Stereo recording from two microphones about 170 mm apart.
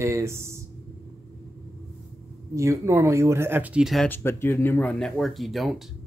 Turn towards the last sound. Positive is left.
turn(degrees=0)  # may be behind; listen again after turning